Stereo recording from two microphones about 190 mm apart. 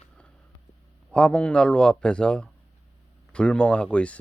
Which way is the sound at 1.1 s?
5° left (ahead or behind).